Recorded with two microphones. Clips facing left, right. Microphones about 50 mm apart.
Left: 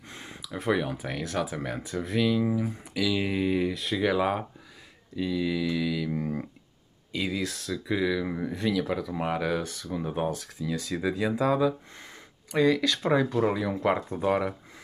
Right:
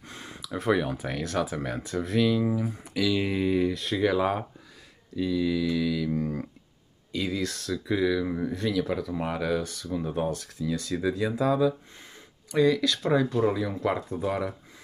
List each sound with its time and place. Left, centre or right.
0.1 s a sound: centre
0.6 s speech: centre
9.6 s speech: left